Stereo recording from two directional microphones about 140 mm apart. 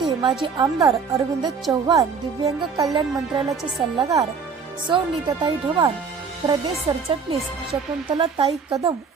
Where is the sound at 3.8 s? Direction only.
40° right (ahead or behind).